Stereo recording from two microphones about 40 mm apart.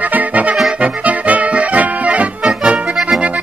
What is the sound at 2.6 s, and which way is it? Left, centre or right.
Accordion, right.